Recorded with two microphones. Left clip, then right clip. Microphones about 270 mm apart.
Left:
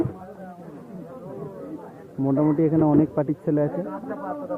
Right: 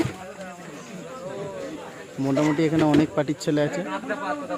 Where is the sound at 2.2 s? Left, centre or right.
Centre.